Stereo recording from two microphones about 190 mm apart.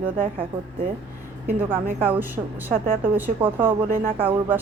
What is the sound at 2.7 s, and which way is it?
Speech, 50° right (ahead or behind).